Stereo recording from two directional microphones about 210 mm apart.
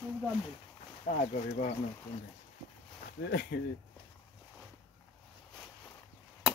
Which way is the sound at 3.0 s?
45° left (ahead or behind).